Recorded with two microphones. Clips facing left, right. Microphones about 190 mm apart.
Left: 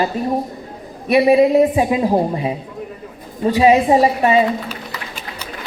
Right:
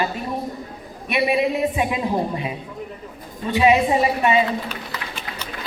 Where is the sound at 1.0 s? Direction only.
35° left (ahead or behind).